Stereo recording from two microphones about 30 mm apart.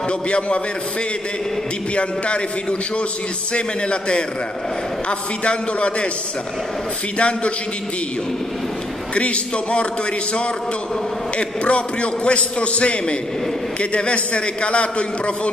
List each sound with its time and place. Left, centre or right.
2.0 s a man's voice: left
3.5 s a man's voice: left
5.4 s a man's voice: left
7.2 s a man's voice: left
9.1 s a man's voice: left
11.3 s a man's voice: left